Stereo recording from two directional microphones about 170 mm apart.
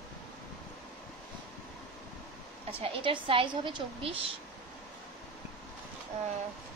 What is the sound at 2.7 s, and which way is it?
A woman's voice, 30° right (ahead or behind).